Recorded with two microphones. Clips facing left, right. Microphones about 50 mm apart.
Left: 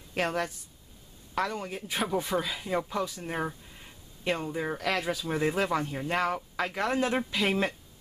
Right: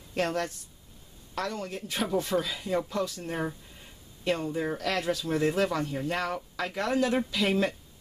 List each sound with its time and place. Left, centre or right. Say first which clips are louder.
0.1 s speech: even; centre